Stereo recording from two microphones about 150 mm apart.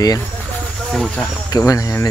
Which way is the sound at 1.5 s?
25° left (ahead or behind).